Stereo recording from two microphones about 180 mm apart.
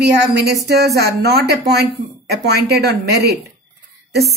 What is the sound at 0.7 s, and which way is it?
A woman's voice, 65° right (ahead or behind).